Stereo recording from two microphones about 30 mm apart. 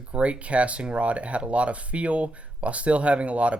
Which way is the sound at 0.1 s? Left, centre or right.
Right.